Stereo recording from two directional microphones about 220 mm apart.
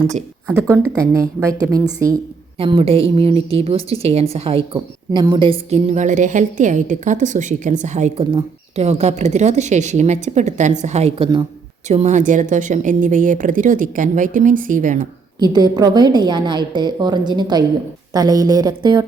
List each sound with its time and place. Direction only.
0.4 s a woman's voice: 15° right (ahead or behind); by 15.0 s 35° right (ahead or behind)
15.4 s a woman's voice: 20° right (ahead or behind)